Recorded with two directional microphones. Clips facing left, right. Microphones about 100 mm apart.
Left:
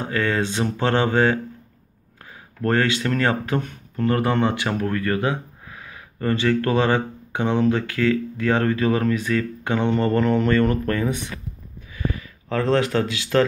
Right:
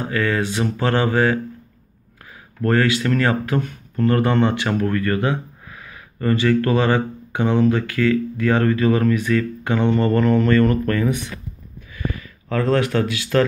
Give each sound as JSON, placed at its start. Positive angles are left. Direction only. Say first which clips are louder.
{"t": 0.0, "sound": "speech", "louder": "right 1 dB", "side_deg": 25}
{"t": 2.6, "sound": "a man's voice", "louder": "right 2 dB", "side_deg": 25}